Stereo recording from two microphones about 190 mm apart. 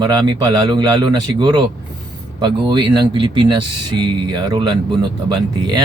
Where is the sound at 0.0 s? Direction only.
20° right (ahead or behind).